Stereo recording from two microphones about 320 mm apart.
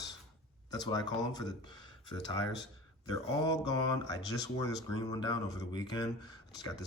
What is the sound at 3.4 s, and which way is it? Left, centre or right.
Speech, centre.